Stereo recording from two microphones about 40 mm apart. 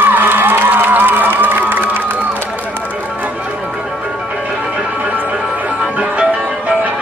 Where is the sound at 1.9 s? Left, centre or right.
Right.